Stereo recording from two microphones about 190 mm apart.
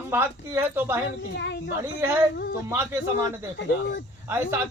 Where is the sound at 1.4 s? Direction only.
65° left (ahead or behind).